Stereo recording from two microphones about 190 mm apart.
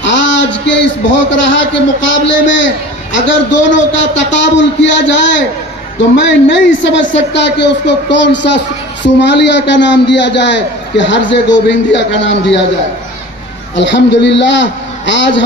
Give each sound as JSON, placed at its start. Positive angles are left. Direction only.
{"t": 0.0, "sound": "a man's voice", "side_deg": 70}
{"t": 13.7, "sound": "a woman's voice", "side_deg": 70}